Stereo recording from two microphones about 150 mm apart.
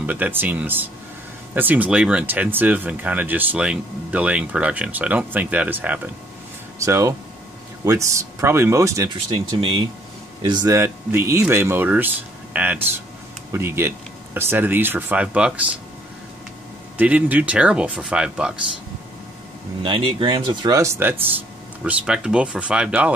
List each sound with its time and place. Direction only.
0.0 s speech: 10° right (ahead or behind)
9.6 s speech: 35° right (ahead or behind); by 15.6 s 10° right (ahead or behind)
16.9 s speech: 10° right (ahead or behind)
19.8 s speech: 35° right (ahead or behind); by 23.1 s 10° right (ahead or behind)